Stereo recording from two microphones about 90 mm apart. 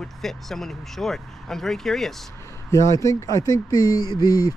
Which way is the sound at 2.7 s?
35° left (ahead or behind).